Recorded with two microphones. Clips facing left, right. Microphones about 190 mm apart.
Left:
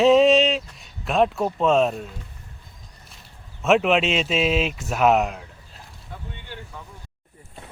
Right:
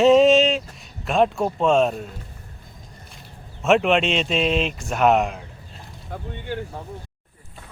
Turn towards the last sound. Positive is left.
turn(degrees=-45)  # may be behind; listen again after turning